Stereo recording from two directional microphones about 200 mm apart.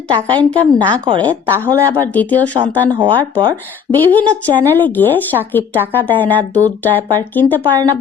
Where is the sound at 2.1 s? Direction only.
10° left (ahead or behind).